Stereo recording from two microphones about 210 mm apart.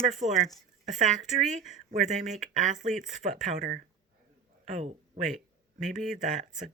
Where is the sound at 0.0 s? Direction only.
35° right (ahead or behind).